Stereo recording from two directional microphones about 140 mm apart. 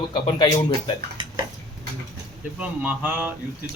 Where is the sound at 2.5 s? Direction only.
10° right (ahead or behind).